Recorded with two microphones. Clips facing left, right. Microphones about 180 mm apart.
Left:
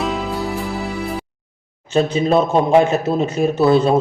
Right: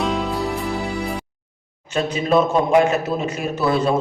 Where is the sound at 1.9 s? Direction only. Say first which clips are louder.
Left 3 dB; 25° left (ahead or behind).